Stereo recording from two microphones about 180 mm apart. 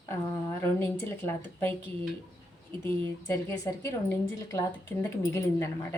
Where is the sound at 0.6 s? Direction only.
15° left (ahead or behind).